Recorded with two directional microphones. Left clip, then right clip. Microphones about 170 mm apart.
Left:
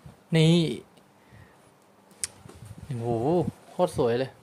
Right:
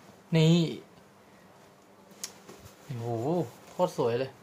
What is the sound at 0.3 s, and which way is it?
Speech, 50° left (ahead or behind).